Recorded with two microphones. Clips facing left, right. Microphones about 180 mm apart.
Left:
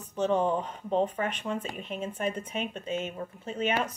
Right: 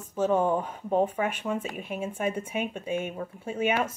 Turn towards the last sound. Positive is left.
turn(degrees=-10)  # may be behind; listen again after turning